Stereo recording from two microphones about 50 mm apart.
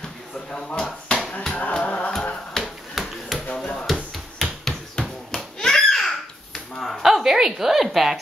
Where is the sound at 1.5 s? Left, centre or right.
Left.